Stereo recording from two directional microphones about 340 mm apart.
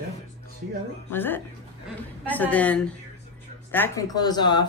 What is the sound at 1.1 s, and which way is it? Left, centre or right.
A woman's voice, centre.